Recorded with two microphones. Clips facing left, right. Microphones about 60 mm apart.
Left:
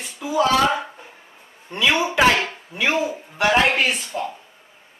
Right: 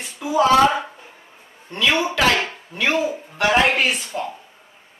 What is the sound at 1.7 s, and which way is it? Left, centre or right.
Speech, centre.